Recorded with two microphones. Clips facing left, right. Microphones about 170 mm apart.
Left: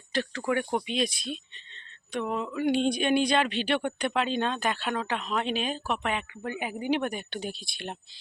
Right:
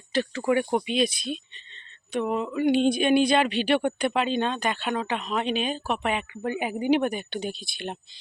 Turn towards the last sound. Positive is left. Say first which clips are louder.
# right 4 dB
turn(degrees=0)  # may be behind; listen again after turning